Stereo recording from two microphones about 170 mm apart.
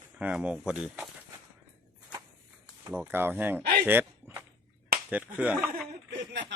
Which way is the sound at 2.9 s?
10° right (ahead or behind).